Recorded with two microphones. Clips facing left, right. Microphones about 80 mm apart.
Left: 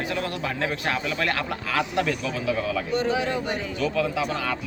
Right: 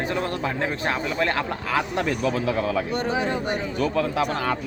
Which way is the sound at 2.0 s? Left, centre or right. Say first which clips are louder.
Right 3 dB; right.